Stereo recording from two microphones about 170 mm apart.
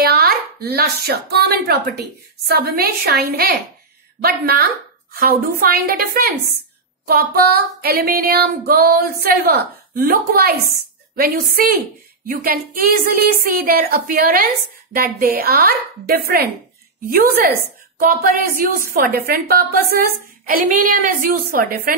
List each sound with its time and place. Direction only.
0.0 s chopping: 65° right (ahead or behind)
1.7 s a woman's voice: 70° right (ahead or behind)